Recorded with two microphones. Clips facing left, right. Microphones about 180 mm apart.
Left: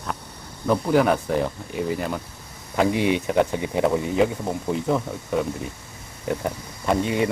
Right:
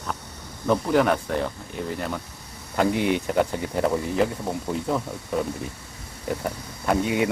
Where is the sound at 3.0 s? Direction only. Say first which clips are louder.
Left 2 dB; 50° right (ahead or behind).